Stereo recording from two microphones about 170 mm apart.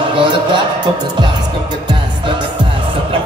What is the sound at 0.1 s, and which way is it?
Speech, 30° right (ahead or behind).